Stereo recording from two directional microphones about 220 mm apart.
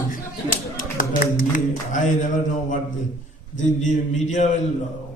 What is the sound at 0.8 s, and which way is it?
Speech, 40° left (ahead or behind).